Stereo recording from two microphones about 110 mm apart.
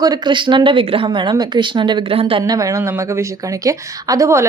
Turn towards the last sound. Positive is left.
turn(degrees=-30)  # may be behind; listen again after turning